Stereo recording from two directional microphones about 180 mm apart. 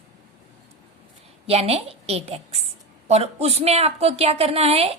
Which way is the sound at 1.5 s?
35° right (ahead or behind).